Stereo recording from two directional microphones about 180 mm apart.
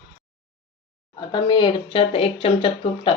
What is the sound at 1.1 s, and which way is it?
Speech, 25° left (ahead or behind).